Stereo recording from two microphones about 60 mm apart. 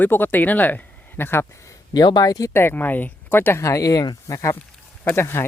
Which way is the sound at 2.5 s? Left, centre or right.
Left.